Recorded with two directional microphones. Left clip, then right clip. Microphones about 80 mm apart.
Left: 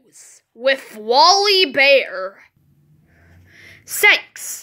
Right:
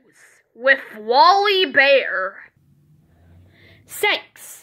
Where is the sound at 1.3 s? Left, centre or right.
Left.